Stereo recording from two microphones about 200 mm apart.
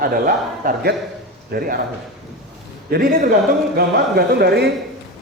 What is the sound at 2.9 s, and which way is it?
A man's voice, 50° right (ahead or behind).